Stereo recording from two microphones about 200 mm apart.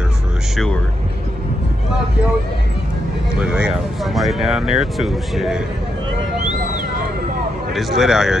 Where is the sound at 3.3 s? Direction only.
5° right (ahead or behind).